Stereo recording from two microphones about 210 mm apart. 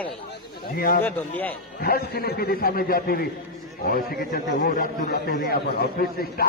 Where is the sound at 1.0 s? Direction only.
10° left (ahead or behind).